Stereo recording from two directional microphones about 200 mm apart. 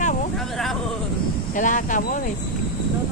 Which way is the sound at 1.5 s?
40° left (ahead or behind).